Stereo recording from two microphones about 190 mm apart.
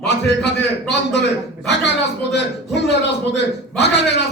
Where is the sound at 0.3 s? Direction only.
65° left (ahead or behind).